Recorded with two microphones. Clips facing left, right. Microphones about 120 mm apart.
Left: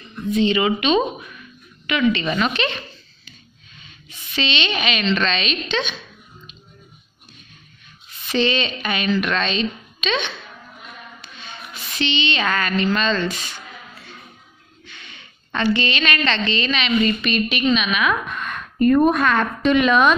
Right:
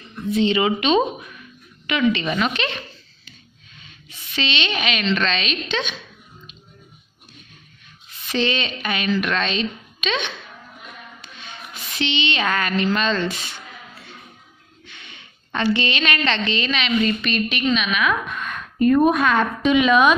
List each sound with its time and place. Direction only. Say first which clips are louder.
0.4 s speech: even; 25° right (ahead or behind)
2.2 s a woman's voice: left 1 dB; 5° right (ahead or behind)
4.4 s a woman's voice: left 1 dB; 5° right (ahead or behind)
8.3 s a woman's voice: left 2 dB; 5° right (ahead or behind)
12.0 s speech: left 1 dB; 15° right (ahead or behind)
15.0 s a sound: left 1 dB; 15° right (ahead or behind)
15.6 s a woman's voice: left 1 dB; 20° right (ahead or behind); by 20.2 s 5° right (ahead or behind)